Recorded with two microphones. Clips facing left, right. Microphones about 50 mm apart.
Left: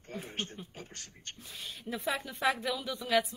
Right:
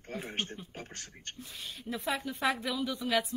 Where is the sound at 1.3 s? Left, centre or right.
Centre.